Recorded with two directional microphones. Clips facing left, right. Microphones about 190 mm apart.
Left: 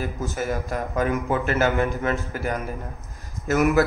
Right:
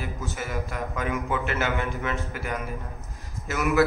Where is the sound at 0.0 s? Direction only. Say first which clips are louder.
Left 6 dB; 40° left (ahead or behind).